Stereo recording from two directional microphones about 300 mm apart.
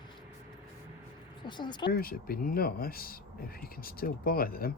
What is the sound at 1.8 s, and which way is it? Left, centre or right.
Speech, left.